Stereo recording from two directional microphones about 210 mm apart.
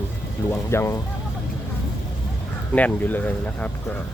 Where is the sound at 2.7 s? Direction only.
10° left (ahead or behind).